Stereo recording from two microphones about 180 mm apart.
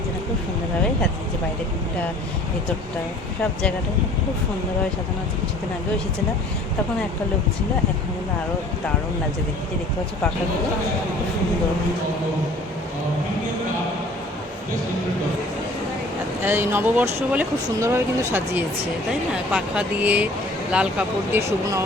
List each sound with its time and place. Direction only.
16.4 s speech: 10° right (ahead or behind)